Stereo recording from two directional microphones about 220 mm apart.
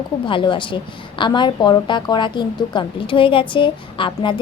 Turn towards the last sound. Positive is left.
turn(degrees=20)  # may be behind; listen again after turning